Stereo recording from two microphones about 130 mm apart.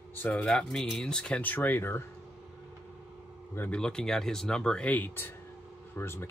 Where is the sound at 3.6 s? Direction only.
5° left (ahead or behind).